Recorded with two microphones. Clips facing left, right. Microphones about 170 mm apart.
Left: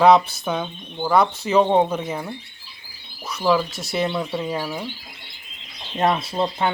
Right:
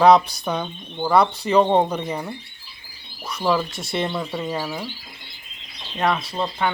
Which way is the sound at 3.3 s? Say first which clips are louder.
Left 2 dB; centre (ahead or behind).